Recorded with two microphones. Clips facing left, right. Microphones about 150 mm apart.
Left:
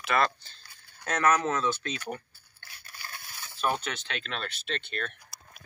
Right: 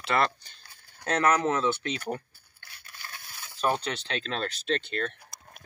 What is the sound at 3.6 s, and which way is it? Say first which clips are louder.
Speech: right 2 dB; 30° right (ahead or behind).